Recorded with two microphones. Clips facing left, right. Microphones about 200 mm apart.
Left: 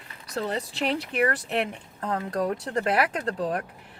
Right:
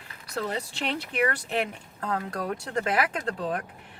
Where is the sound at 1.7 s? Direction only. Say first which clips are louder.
Left 1 dB; 30° left (ahead or behind).